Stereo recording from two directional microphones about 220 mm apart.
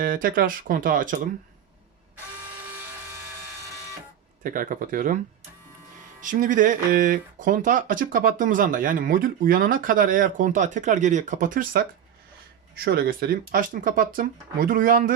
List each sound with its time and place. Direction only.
0.0 s speech: 40° right (ahead or behind)
4.4 s speech: 40° right (ahead or behind)